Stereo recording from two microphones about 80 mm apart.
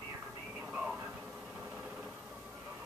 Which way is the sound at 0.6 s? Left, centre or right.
Centre.